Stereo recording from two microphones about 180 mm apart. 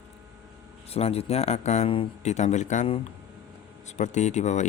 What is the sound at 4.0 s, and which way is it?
Speech, 40° left (ahead or behind).